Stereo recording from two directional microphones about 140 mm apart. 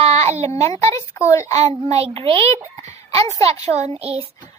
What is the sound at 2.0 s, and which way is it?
Speech, 40° right (ahead or behind).